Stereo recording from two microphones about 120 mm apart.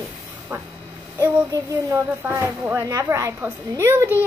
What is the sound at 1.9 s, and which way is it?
A child's voice, 20° right (ahead or behind).